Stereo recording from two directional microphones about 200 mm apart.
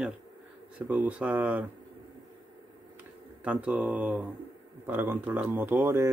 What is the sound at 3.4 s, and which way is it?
A man's voice, 5° right (ahead or behind).